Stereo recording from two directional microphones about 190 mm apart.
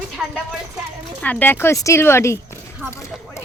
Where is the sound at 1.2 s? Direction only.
10° left (ahead or behind).